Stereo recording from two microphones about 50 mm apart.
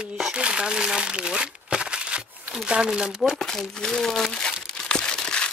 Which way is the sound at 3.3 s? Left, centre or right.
Centre.